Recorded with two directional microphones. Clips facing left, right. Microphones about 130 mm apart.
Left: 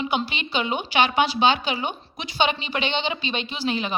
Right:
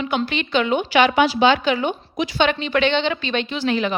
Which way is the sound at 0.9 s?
25° left (ahead or behind).